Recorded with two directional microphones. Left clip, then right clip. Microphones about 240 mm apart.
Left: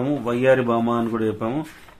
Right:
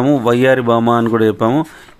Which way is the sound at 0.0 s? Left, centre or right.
Right.